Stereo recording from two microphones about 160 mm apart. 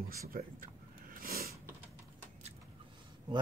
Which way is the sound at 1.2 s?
70° right (ahead or behind).